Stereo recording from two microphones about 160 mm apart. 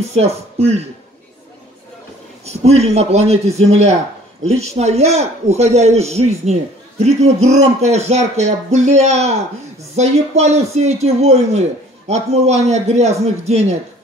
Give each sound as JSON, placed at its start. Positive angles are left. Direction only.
{"t": 0.1, "sound": "speech", "side_deg": -40}
{"t": 2.4, "sound": "a man's voice", "side_deg": -40}